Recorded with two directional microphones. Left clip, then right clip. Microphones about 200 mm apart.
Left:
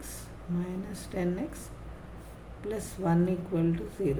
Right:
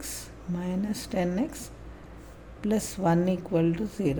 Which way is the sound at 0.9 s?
45° right (ahead or behind).